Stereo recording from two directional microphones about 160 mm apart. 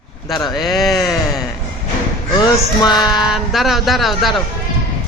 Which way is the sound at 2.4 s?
25° left (ahead or behind).